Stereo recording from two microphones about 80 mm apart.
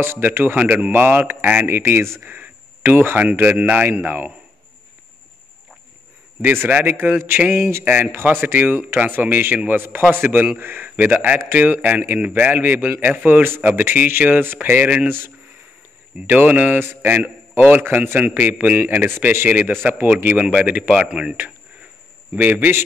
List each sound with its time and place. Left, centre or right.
0.0 s speech: right
0.6 s a man's voice: centre
6.4 s a man's voice: right
15.0 s a man's voice: right